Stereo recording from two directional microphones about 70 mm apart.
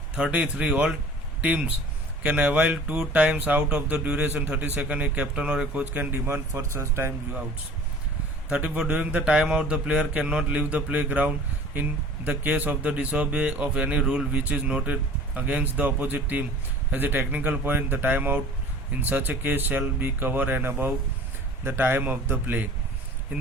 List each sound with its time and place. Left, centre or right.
0.2 s speech: centre; by 7.1 s right
8.4 s speech: centre